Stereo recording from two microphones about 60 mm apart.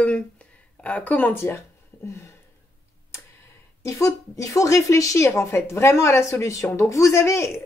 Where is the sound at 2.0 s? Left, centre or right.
Left.